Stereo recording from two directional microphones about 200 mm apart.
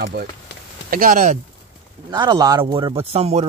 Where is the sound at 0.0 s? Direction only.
55° right (ahead or behind).